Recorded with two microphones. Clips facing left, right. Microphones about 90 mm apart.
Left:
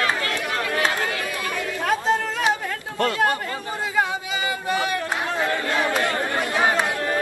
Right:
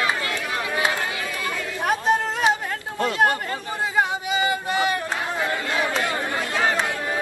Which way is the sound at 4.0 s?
20° right (ahead or behind).